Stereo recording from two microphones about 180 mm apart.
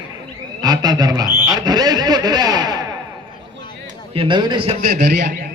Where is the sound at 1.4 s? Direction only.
20° right (ahead or behind).